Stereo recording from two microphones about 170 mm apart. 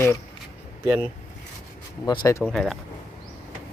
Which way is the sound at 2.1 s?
25° left (ahead or behind).